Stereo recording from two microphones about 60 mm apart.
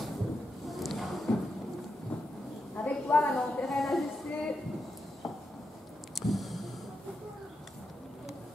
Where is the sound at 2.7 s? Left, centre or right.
Left.